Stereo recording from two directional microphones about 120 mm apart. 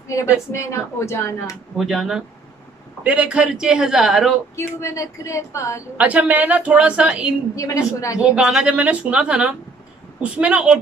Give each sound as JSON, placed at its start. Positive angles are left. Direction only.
{"t": 0.1, "sound": "speech", "side_deg": 25}
{"t": 1.8, "sound": "a man's voice", "side_deg": 0}
{"t": 4.6, "sound": "speech", "side_deg": 25}
{"t": 5.9, "sound": "a woman's voice", "side_deg": -10}
{"t": 7.5, "sound": "speech", "side_deg": 25}
{"t": 8.2, "sound": "a woman's voice", "side_deg": -5}